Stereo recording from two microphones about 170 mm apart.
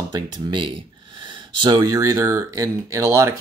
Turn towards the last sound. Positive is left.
turn(degrees=-15)  # may be behind; listen again after turning